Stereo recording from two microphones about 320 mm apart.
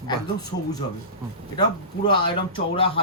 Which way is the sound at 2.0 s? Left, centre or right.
Centre.